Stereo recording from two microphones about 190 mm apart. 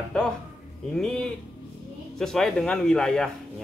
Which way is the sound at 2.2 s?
5° left (ahead or behind).